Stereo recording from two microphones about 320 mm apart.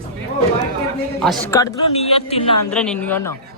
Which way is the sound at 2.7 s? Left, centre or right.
Centre.